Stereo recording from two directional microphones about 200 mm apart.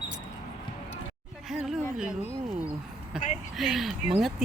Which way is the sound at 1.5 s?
5° right (ahead or behind).